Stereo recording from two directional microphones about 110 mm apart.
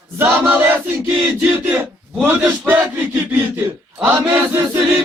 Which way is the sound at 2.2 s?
15° right (ahead or behind).